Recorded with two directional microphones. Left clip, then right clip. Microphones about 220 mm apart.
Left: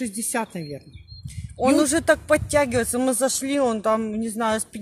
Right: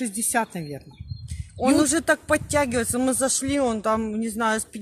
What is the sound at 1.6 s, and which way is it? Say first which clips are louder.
A man's voice: left 2 dB; 15° left (ahead or behind).